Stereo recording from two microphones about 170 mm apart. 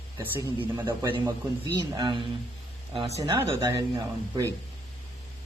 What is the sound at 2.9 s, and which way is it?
Speech, 40° right (ahead or behind).